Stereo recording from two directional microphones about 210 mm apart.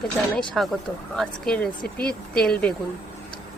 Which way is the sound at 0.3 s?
Centre (ahead or behind).